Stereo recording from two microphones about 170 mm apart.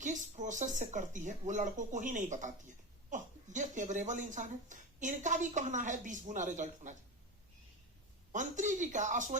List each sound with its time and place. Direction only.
0.0 s speech: 45° right (ahead or behind)
8.3 s speech: 45° right (ahead or behind)